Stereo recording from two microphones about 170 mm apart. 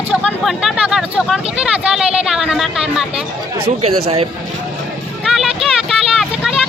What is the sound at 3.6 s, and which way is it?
Speech, 40° right (ahead or behind).